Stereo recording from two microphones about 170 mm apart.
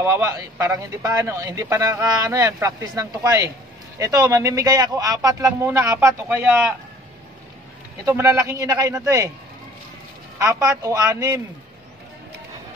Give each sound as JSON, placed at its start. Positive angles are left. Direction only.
{"t": 0.0, "sound": "a man's voice", "side_deg": -15}
{"t": 6.2, "sound": "speech", "side_deg": -5}
{"t": 8.0, "sound": "a man's voice", "side_deg": -15}
{"t": 10.4, "sound": "a woman's voice", "side_deg": -20}